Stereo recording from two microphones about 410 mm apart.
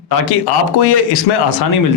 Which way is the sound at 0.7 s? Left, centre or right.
Left.